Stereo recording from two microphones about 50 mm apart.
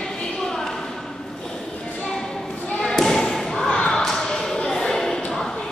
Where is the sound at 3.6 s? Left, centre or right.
Left.